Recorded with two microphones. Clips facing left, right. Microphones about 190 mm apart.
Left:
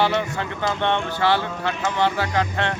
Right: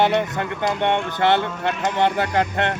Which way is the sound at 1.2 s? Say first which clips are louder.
Right 3 dB; 55° right (ahead or behind).